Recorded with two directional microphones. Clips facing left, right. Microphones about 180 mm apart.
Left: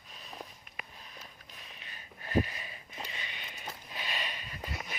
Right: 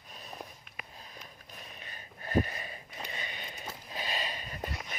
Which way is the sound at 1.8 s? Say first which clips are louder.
Right 2 dB; 45° right (ahead or behind).